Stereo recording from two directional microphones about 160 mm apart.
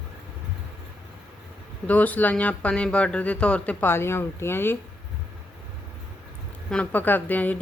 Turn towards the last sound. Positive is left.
turn(degrees=10)  # may be behind; listen again after turning